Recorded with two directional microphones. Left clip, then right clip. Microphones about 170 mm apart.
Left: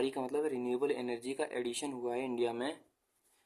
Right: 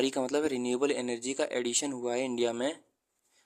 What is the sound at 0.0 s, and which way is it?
Speech, 40° right (ahead or behind).